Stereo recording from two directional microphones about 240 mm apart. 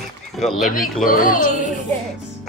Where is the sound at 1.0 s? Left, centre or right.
Left.